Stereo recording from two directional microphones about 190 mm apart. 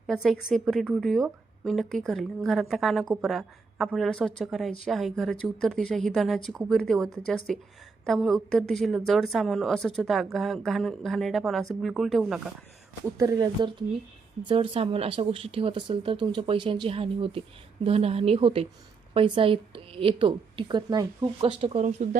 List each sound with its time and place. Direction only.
0.1 s a woman's voice: centre (ahead or behind)
13.1 s a woman's voice: 20° right (ahead or behind); by 22.2 s 35° right (ahead or behind)